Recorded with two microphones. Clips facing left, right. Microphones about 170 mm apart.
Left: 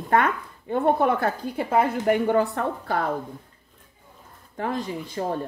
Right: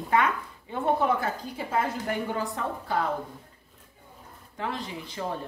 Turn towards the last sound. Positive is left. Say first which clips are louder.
# left 5 dB
turn(degrees=45)  # may be behind; listen again after turning